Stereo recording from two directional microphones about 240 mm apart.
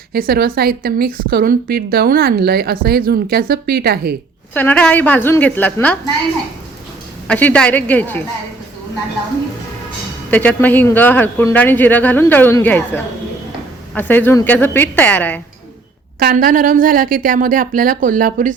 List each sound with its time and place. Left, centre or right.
0.1 s a woman's voice: right
4.5 s speech: centre
7.3 s speech: centre
10.3 s speech: centre
16.2 s a woman's voice: right